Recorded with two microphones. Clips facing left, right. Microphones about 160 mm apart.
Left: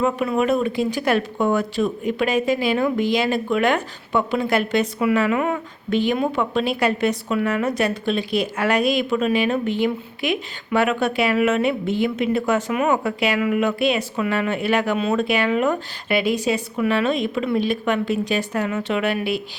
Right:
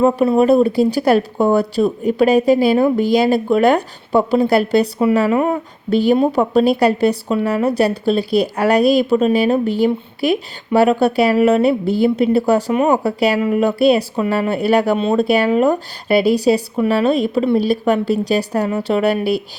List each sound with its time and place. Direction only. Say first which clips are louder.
0.0 s speech: right 7 dB; 35° right (ahead or behind)